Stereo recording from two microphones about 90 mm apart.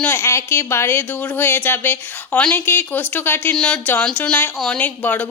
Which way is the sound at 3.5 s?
10° left (ahead or behind).